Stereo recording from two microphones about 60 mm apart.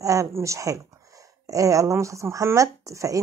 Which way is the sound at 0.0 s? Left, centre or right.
Right.